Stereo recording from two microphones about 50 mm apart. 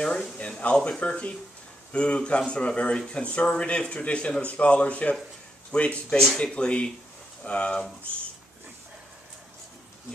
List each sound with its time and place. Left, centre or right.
0.6 s speech: left